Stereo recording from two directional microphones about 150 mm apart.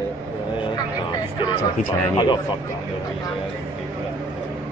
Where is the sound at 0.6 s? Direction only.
35° left (ahead or behind).